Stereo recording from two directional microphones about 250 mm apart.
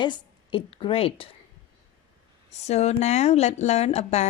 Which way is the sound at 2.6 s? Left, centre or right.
Left.